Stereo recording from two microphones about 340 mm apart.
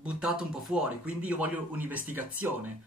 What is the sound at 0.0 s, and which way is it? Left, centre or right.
Speech, centre.